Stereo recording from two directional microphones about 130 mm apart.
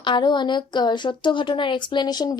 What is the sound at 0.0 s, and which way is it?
A woman's voice, 35° left (ahead or behind).